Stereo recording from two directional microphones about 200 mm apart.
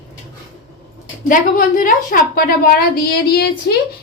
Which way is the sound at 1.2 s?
40° left (ahead or behind).